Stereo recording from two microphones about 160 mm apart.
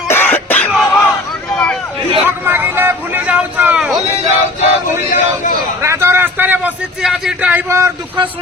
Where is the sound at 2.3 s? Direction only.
15° right (ahead or behind).